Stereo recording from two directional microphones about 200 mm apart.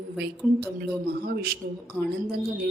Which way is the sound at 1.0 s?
50° right (ahead or behind).